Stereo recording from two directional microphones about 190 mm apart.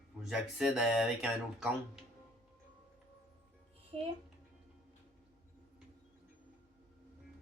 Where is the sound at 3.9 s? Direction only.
30° right (ahead or behind).